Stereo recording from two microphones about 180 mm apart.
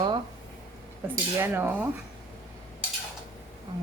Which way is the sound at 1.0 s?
10° right (ahead or behind).